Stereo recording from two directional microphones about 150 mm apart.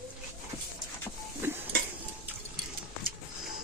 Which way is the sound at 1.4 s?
15° right (ahead or behind).